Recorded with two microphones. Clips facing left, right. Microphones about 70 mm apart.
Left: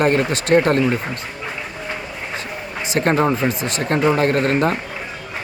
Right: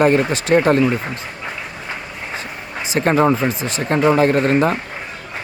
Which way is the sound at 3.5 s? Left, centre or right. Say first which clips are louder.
Even; left.